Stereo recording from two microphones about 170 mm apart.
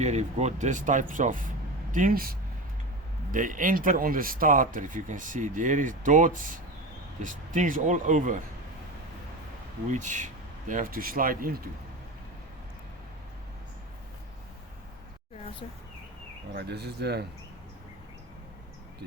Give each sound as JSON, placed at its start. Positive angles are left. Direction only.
{"t": 0.0, "sound": "speech", "side_deg": -40}
{"t": 3.3, "sound": "speech", "side_deg": -50}
{"t": 9.9, "sound": "speech", "side_deg": -45}
{"t": 16.6, "sound": "speech", "side_deg": -75}